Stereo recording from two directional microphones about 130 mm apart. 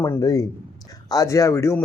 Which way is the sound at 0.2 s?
30° left (ahead or behind).